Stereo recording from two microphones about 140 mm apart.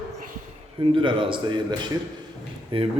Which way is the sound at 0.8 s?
35° right (ahead or behind).